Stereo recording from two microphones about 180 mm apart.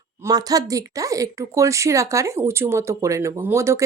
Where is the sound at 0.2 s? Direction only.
20° right (ahead or behind).